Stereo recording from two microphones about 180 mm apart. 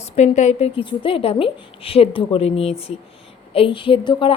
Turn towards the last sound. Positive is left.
turn(degrees=25)  # may be behind; listen again after turning